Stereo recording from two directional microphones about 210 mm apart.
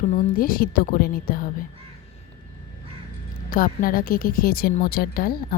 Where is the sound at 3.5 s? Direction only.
40° left (ahead or behind).